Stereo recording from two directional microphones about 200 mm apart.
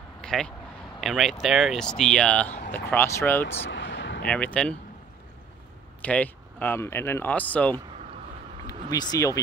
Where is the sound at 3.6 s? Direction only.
60° left (ahead or behind).